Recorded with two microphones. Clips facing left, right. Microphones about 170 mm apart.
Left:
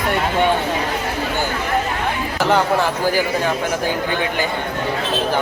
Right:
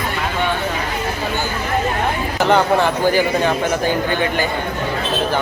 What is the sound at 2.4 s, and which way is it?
Speech, 5° left (ahead or behind).